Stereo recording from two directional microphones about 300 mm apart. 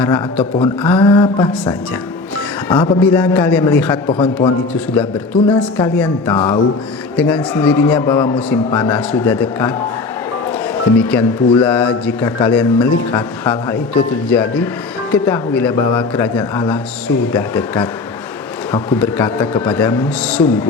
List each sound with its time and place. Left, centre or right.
0.0 s speech: centre
0.8 s a sound: centre
2.6 s speech: centre
10.8 s speech: centre